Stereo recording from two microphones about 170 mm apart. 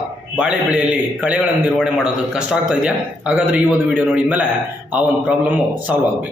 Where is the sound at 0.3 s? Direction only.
5° right (ahead or behind).